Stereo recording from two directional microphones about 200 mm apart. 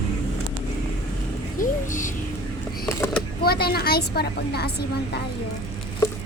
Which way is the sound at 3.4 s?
50° left (ahead or behind).